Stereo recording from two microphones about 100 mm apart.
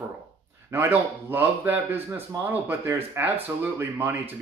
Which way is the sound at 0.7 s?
25° right (ahead or behind).